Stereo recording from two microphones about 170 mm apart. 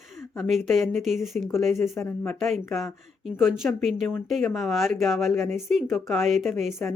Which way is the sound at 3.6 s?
5° left (ahead or behind).